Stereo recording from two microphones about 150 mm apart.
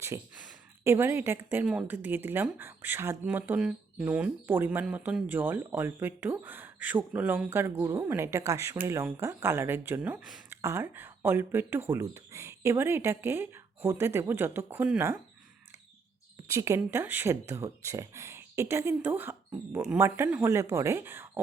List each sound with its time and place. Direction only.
0.3 s a woman's voice: 10° right (ahead or behind)
16.5 s a woman's voice: 20° right (ahead or behind)